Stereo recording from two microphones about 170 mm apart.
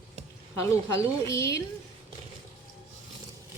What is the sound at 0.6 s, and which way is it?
Speech, 15° left (ahead or behind).